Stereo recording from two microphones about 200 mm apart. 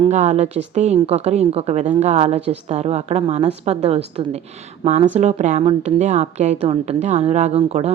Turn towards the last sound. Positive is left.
turn(degrees=-30)  # may be behind; listen again after turning